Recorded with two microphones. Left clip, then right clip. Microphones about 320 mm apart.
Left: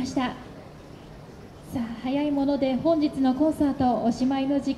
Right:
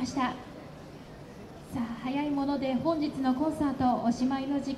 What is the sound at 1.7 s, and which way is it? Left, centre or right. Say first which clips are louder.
A woman's voice: left 5 dB; left.